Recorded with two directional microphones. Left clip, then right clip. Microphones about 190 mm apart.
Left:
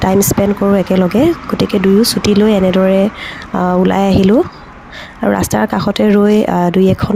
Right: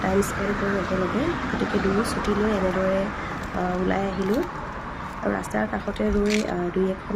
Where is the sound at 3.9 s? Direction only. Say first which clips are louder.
Left 13 dB; 65° left (ahead or behind).